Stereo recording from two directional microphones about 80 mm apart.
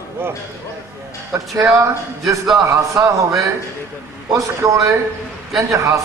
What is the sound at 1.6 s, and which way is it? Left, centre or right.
A man's voice, right.